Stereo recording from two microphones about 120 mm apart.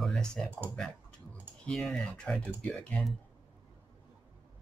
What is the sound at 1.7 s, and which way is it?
Speech, 5° left (ahead or behind).